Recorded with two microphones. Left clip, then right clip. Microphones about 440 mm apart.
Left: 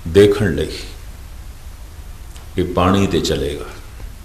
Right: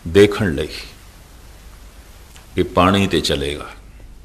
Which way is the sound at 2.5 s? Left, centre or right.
Right.